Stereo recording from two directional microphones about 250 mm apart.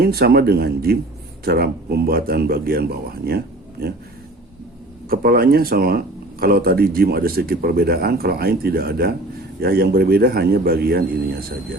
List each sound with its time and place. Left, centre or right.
0.0 s speech: right
5.0 s speech: right